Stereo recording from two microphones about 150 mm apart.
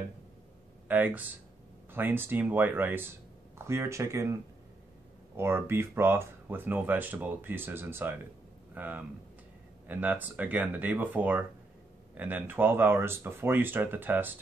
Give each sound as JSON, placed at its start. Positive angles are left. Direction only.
{"t": 0.8, "sound": "speech", "side_deg": -10}
{"t": 5.4, "sound": "speech", "side_deg": -15}